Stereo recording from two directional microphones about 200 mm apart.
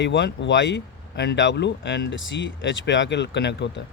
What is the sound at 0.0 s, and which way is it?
Speech, 60° left (ahead or behind).